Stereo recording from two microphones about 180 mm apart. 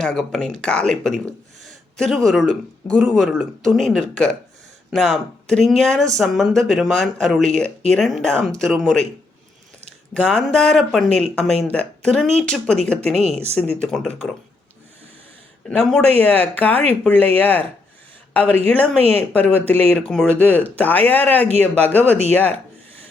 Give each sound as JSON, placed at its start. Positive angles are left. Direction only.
{"t": 0.0, "sound": "speech", "side_deg": 5}
{"t": 10.2, "sound": "speech", "side_deg": 5}
{"t": 13.1, "sound": "speech", "side_deg": -35}
{"t": 13.8, "sound": "speech", "side_deg": 0}
{"t": 15.6, "sound": "speech", "side_deg": 5}